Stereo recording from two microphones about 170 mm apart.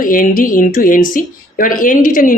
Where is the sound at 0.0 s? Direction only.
55° left (ahead or behind).